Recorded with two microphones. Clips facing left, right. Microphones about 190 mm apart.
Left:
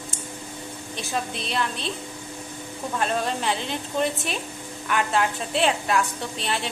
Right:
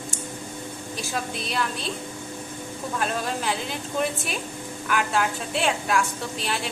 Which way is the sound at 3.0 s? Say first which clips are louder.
Left 2 dB; centre (ahead or behind).